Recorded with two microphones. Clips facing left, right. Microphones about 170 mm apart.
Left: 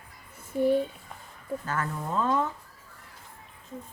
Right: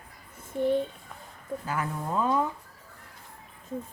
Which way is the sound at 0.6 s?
5° left (ahead or behind).